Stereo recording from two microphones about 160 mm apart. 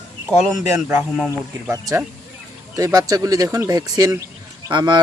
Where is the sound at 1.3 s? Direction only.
20° right (ahead or behind).